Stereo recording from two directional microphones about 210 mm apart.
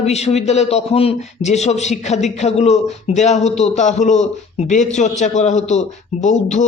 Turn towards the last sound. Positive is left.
turn(degrees=35)  # may be behind; listen again after turning